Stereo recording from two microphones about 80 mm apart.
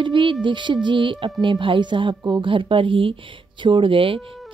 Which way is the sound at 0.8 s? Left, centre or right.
Right.